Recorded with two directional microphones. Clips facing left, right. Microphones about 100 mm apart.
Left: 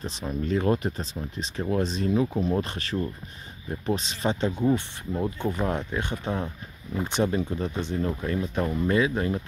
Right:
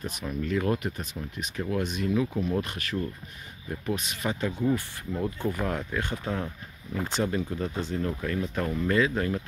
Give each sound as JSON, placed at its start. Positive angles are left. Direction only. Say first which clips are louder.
{"t": 0.0, "sound": "speech", "louder": "left 2 dB", "side_deg": 30}